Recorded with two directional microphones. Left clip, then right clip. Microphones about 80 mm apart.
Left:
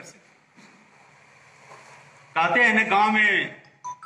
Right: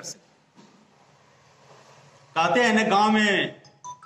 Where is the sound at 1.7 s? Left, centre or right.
Right.